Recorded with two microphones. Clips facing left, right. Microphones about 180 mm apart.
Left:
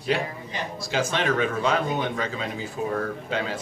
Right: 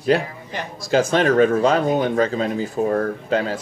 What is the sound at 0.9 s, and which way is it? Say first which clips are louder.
Speech: right 8 dB; 45° right (ahead or behind).